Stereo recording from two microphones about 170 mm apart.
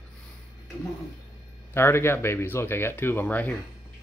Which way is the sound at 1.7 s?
15° left (ahead or behind).